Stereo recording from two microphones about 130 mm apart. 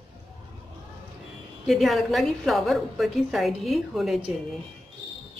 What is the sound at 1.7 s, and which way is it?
A woman's voice, centre (ahead or behind).